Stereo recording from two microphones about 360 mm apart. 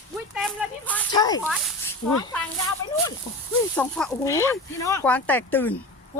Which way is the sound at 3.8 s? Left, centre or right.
Centre.